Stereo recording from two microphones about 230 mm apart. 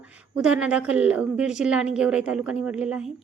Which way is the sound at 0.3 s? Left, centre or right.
Centre.